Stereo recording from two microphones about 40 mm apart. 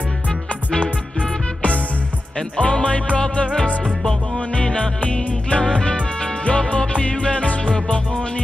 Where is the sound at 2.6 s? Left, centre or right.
Left.